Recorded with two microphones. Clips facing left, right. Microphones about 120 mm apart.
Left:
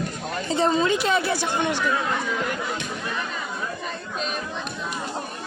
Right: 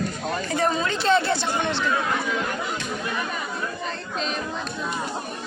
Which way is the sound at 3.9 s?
5° left (ahead or behind).